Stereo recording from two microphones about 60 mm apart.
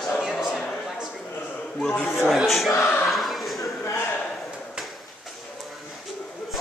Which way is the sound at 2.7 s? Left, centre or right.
Left.